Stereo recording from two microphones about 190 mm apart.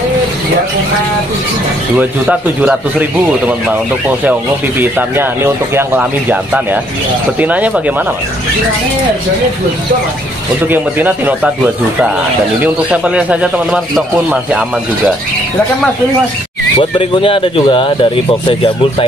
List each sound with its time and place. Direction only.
2.0 s speech: 5° right (ahead or behind)
10.7 s speech: 10° right (ahead or behind)
12.6 s speech: 5° right (ahead or behind)
17.0 s speech: 30° left (ahead or behind)